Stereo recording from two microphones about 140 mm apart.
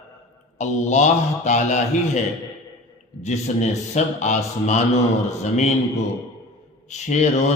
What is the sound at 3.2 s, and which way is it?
A man's voice, 55° left (ahead or behind).